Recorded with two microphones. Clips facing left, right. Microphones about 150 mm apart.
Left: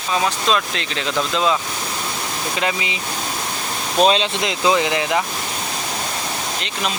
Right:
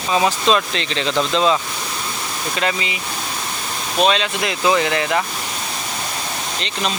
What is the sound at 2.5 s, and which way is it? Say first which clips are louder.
Speech: right 1 dB; 15° left (ahead or behind).